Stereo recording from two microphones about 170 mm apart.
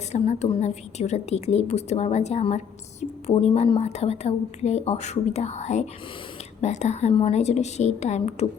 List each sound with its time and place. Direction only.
0.1 s a woman's voice: 40° left (ahead or behind)